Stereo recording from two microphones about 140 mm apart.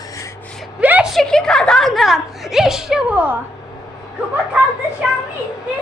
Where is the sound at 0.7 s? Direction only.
10° right (ahead or behind).